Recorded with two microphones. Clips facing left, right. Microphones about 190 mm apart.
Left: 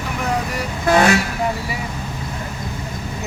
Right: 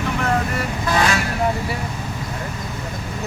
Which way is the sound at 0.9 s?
55° left (ahead or behind).